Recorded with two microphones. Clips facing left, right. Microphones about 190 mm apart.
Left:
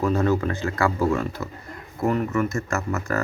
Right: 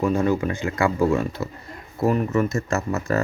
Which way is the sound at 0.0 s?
10° right (ahead or behind).